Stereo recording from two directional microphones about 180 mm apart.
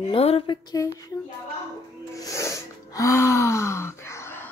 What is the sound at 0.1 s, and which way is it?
Speech, 30° left (ahead or behind).